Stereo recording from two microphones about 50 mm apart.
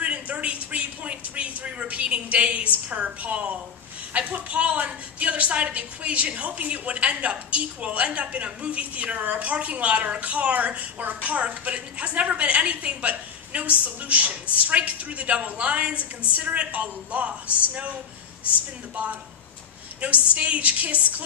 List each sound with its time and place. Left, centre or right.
0.0 s a sound: right
2.9 s a woman's voice: right
20.0 s a woman's voice: right